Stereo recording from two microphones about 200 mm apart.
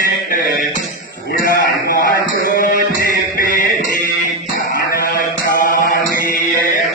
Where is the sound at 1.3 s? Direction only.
45° left (ahead or behind).